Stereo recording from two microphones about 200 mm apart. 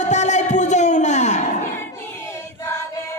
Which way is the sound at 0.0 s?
35° left (ahead or behind).